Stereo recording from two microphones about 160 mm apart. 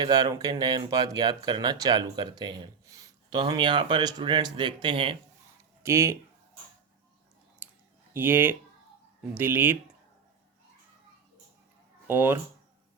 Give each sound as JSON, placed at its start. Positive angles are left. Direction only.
{"t": 0.0, "sound": "speech", "side_deg": -25}
{"t": 5.8, "sound": "speech", "side_deg": -15}
{"t": 7.6, "sound": "clicking", "side_deg": -10}
{"t": 8.1, "sound": "speech", "side_deg": -15}
{"t": 12.0, "sound": "speech", "side_deg": -10}